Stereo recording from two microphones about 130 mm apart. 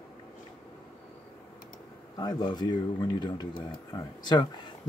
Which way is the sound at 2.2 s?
30° left (ahead or behind).